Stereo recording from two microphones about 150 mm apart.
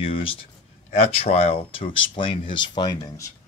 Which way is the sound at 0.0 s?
35° left (ahead or behind).